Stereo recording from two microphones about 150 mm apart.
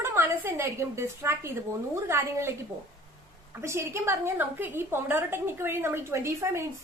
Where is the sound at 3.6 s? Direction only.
20° right (ahead or behind).